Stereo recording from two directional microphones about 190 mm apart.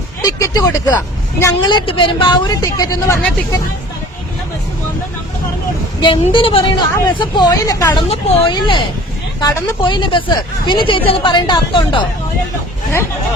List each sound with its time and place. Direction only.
0.2 s a sound: 20° left (ahead or behind)
1.4 s speech: 20° left (ahead or behind)
6.2 s speech: 30° left (ahead or behind)